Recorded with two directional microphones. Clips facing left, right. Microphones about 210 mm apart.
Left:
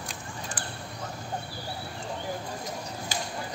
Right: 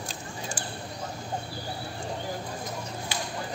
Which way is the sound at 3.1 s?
45° left (ahead or behind).